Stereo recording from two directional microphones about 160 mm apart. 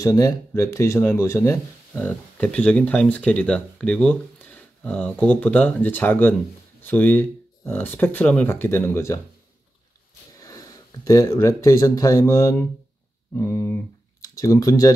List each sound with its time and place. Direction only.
0.0 s speech: 20° left (ahead or behind)
10.4 s speech: 20° left (ahead or behind)